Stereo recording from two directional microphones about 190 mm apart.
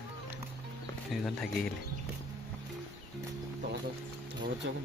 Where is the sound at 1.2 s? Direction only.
Centre (ahead or behind).